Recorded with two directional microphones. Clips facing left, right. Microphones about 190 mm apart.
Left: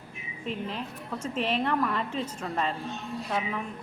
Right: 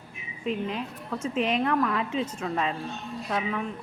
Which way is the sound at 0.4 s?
Centre (ahead or behind).